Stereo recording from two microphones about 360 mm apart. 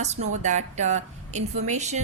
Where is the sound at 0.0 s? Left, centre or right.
Centre.